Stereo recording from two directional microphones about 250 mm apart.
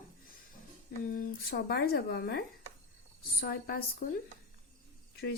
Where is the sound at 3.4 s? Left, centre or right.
Left.